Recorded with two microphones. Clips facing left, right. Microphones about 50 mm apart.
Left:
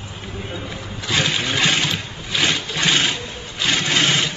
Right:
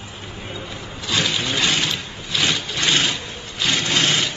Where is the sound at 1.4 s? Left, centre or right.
Centre.